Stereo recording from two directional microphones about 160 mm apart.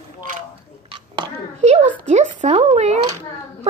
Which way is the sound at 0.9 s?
40° right (ahead or behind).